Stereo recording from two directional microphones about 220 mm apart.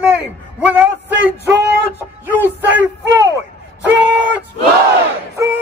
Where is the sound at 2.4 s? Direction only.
10° right (ahead or behind).